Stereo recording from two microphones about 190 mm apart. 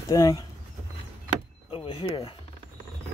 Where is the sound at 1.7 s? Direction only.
30° left (ahead or behind).